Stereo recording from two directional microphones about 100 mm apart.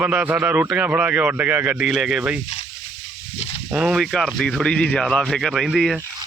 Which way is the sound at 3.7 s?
5° right (ahead or behind).